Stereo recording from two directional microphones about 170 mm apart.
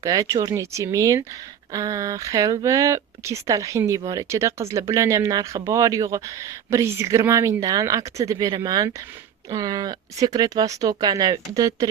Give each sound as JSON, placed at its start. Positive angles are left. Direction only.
{"t": 0.0, "sound": "speech", "side_deg": -20}